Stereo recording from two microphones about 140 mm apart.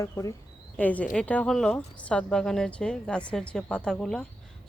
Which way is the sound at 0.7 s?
10° left (ahead or behind).